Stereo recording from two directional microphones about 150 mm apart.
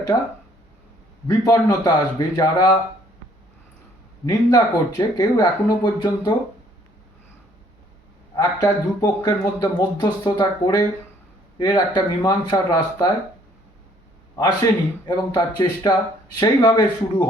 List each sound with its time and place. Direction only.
0.1 s speech: 20° left (ahead or behind)
1.3 s speech: 25° left (ahead or behind)
4.3 s speech: 25° left (ahead or behind)
8.4 s speech: 25° left (ahead or behind)
15.0 s speech: 25° left (ahead or behind)